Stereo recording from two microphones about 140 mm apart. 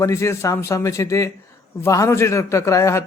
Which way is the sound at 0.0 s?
20° left (ahead or behind).